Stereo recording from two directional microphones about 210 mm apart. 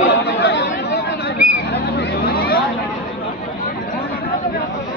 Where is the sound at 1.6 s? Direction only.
50° left (ahead or behind).